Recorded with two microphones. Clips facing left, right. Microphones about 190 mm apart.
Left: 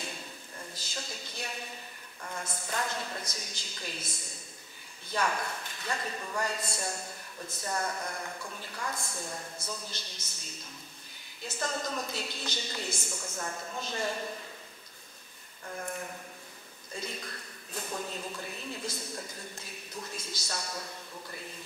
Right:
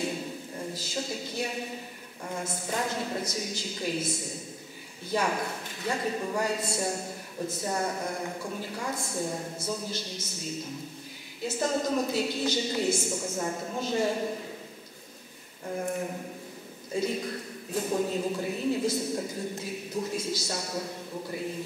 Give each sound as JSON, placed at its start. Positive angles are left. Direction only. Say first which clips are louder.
{"t": 0.7, "sound": "a sound", "louder": "right 7 dB", "side_deg": -5}
{"t": 2.2, "sound": "a man's voice", "louder": "right 5 dB", "side_deg": -15}
{"t": 5.1, "sound": "a man's voice", "louder": "right 4 dB", "side_deg": -10}
{"t": 7.6, "sound": "a man's voice", "louder": "right 3 dB", "side_deg": -20}
{"t": 8.9, "sound": "speech", "louder": "right 8 dB", "side_deg": -20}
{"t": 9.8, "sound": "a man's voice", "louder": "right 10 dB", "side_deg": -5}
{"t": 13.1, "sound": "speech", "louder": "right 7 dB", "side_deg": -25}
{"t": 13.7, "sound": "a man's voice", "louder": "right 7 dB", "side_deg": -10}
{"t": 15.6, "sound": "a man's voice", "louder": "right 7 dB", "side_deg": -20}
{"t": 20.4, "sound": "speech", "louder": "right 6 dB", "side_deg": -25}